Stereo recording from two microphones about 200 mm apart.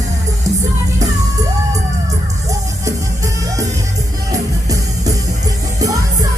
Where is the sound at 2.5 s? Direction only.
15° right (ahead or behind).